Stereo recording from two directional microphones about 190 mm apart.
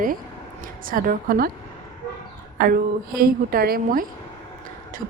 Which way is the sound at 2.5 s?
50° right (ahead or behind).